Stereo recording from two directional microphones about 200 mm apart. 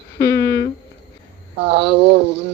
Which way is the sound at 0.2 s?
15° left (ahead or behind).